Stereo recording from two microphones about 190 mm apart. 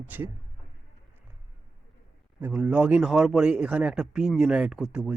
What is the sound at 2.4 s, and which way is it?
Speech, 5° right (ahead or behind).